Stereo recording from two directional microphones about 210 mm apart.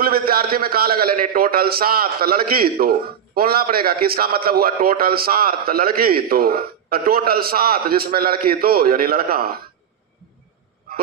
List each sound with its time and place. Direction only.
0.0 s a man's voice: 45° right (ahead or behind)